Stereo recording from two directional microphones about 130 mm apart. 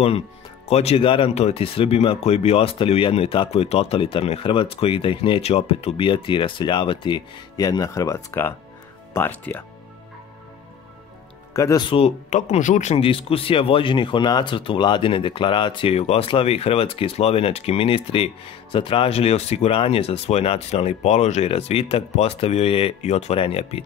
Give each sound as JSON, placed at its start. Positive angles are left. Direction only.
{"t": 0.7, "sound": "speech", "side_deg": 55}
{"t": 11.5, "sound": "speech", "side_deg": 25}
{"t": 11.8, "sound": "speech", "side_deg": 45}
{"t": 12.3, "sound": "speech", "side_deg": 65}
{"t": 12.9, "sound": "speech", "side_deg": 45}